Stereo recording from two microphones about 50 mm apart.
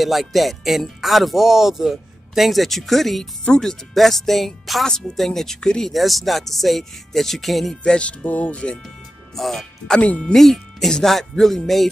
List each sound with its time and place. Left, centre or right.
0.0 s speech: centre
7.8 s speech: left
8.8 s music: centre
9.9 s speech: left
10.3 s speech: centre